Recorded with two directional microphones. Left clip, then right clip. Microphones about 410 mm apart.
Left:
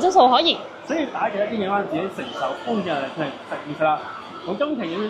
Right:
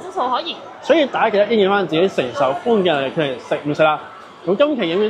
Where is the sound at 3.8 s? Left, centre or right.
Right.